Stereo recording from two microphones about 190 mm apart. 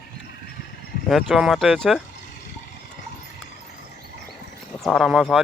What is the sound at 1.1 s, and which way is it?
Speech, centre (ahead or behind).